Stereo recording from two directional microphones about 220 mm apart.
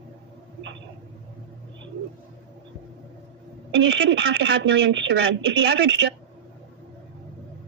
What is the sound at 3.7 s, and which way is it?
A woman's voice, 55° right (ahead or behind).